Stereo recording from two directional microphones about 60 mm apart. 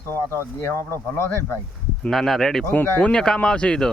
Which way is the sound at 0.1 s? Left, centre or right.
Left.